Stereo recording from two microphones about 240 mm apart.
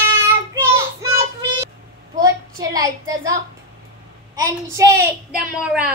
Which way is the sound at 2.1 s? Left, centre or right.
Centre.